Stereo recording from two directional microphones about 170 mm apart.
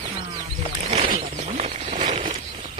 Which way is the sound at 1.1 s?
45° right (ahead or behind).